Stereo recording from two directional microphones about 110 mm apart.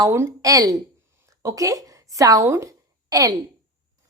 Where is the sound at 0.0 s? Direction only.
30° right (ahead or behind).